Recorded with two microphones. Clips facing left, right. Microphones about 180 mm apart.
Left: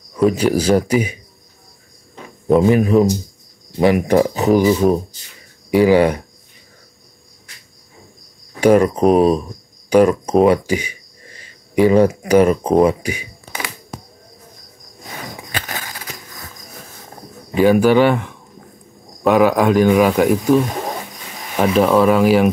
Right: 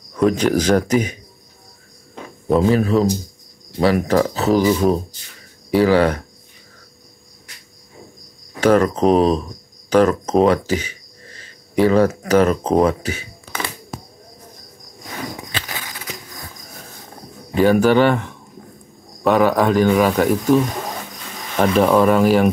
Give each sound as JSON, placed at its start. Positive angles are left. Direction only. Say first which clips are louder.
{"t": 0.1, "sound": "speech", "louder": "left 1 dB", "side_deg": 5}
{"t": 2.6, "sound": "speech", "louder": "left 2 dB", "side_deg": 15}
{"t": 8.5, "sound": "speech", "louder": "left 2 dB", "side_deg": 10}
{"t": 12.8, "sound": "a sound", "louder": "left 2 dB", "side_deg": 10}
{"t": 15.5, "sound": "a sound", "louder": "left 2 dB", "side_deg": 50}
{"t": 17.6, "sound": "speech", "louder": "left 2 dB", "side_deg": 10}